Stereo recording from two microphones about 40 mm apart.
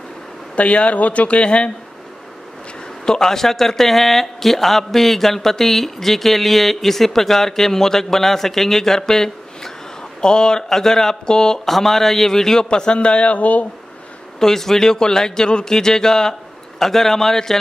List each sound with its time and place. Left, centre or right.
0.6 s speech: left
3.1 s speech: centre
12.6 s speech: left
14.4 s speech: centre